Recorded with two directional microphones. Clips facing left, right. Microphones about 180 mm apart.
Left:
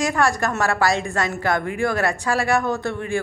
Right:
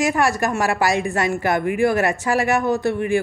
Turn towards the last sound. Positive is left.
turn(degrees=-15)  # may be behind; listen again after turning